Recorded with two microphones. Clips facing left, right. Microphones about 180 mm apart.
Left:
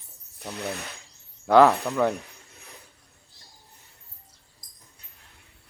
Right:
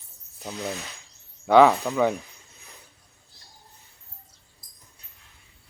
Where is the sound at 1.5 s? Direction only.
Centre (ahead or behind).